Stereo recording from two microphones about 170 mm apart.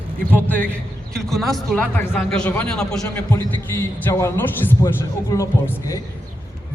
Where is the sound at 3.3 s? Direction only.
15° left (ahead or behind).